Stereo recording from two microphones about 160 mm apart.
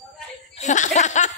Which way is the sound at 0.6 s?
50° left (ahead or behind).